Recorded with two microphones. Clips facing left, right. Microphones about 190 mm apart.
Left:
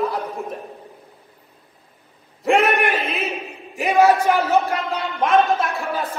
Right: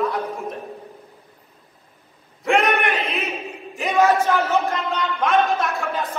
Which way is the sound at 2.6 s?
Centre (ahead or behind).